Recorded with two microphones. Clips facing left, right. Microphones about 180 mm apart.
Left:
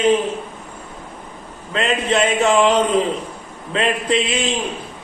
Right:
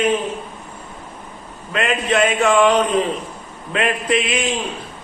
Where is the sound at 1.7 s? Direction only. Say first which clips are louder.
Even; 25° left (ahead or behind).